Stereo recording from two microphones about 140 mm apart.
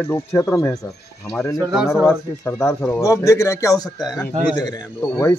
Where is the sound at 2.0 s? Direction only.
15° left (ahead or behind).